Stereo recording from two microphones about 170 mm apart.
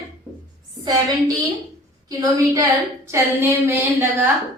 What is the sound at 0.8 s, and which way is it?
A woman's voice, 25° right (ahead or behind).